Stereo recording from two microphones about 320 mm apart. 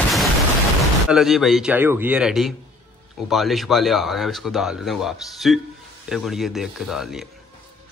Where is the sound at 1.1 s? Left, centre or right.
Centre.